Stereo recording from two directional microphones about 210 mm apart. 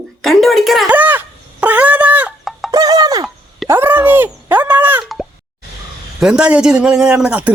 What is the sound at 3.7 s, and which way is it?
Plop, 10° right (ahead or behind).